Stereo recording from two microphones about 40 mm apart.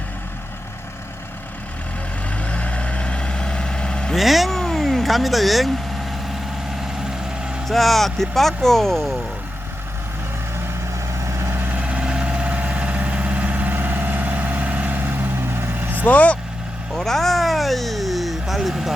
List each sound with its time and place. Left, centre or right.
2.4 s vehicle: left
4.1 s vehicle: centre
7.7 s speech: centre
11.4 s vehicle: right
11.8 s vehicle: right
13.7 s vehicle: right
15.4 s vehicle: right
15.7 s vehicle: right
16.0 s speech: left
16.9 s speech: centre